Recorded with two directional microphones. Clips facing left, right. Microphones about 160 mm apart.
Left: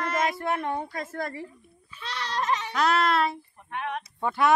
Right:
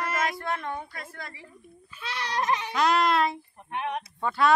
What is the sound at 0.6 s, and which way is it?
Speech, 30° left (ahead or behind).